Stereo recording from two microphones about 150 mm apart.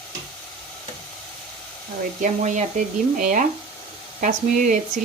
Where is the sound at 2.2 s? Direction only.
55° right (ahead or behind).